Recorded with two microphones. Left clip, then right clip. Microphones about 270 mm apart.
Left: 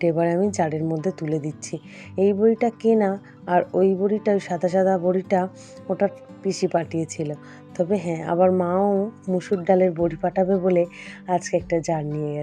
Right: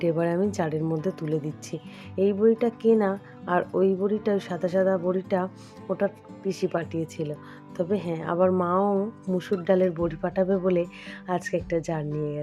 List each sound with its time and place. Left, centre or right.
0.0 s speech: centre